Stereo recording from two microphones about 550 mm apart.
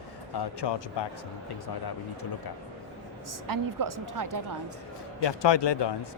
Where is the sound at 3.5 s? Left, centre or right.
Right.